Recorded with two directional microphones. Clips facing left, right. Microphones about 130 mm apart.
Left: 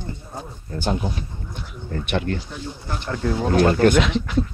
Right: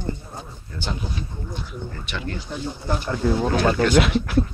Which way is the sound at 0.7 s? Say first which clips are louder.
Left 6 dB; 45° left (ahead or behind).